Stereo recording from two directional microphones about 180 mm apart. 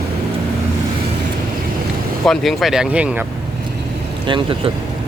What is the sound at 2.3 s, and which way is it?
Speech, centre (ahead or behind).